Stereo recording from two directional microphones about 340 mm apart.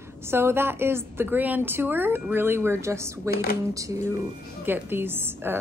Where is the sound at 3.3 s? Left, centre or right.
Left.